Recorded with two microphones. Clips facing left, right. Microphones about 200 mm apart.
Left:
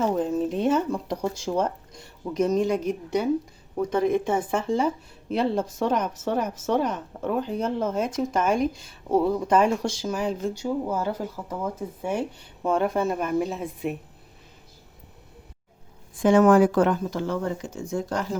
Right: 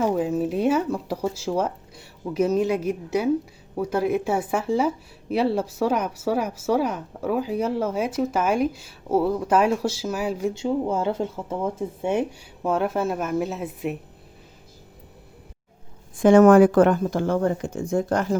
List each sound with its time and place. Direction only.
0.0 s speech: 5° right (ahead or behind)
10.5 s speech: 25° right (ahead or behind)
12.6 s speech: 5° right (ahead or behind)
16.2 s speech: 55° right (ahead or behind)